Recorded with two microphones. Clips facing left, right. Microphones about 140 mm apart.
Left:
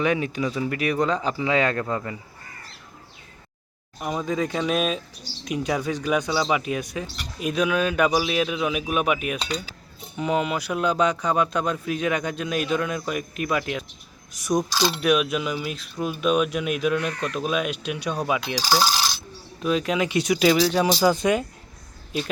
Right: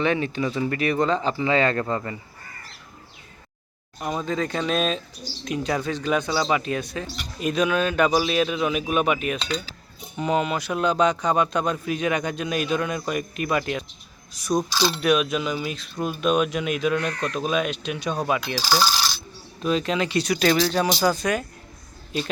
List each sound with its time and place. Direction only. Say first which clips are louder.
0.0 s a man's voice: even; 5° left (ahead or behind)
4.0 s a man's voice: even; 5° left (ahead or behind)
14.7 s a man's voice: right 1 dB; 15° left (ahead or behind)
18.5 s coin: left 1 dB; 15° left (ahead or behind)
19.6 s speech: even; 5° left (ahead or behind)
21.0 s speech: left 2 dB; 20° left (ahead or behind)